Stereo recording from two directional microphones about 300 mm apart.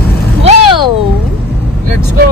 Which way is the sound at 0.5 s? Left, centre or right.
Centre.